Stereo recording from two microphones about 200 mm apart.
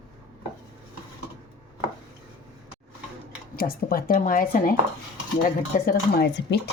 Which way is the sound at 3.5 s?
50° left (ahead or behind).